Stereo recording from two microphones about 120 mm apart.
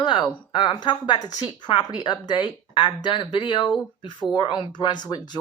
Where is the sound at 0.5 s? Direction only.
40° left (ahead or behind).